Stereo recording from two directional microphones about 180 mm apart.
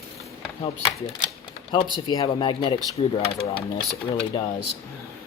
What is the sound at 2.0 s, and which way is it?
Speech, 25° left (ahead or behind).